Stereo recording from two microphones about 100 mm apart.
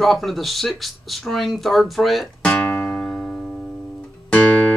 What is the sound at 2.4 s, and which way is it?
Music, 10° left (ahead or behind).